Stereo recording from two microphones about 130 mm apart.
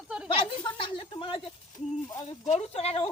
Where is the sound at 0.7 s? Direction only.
40° left (ahead or behind).